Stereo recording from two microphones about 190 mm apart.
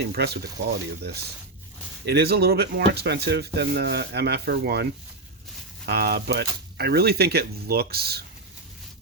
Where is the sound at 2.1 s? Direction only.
55° right (ahead or behind).